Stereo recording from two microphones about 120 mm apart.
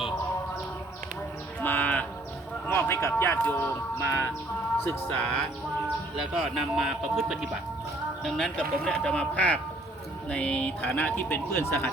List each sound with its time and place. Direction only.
1.6 s a sound: 15° left (ahead or behind)
4.8 s speech: 15° left (ahead or behind)
6.3 s speech: centre (ahead or behind); by 11.9 s 20° left (ahead or behind)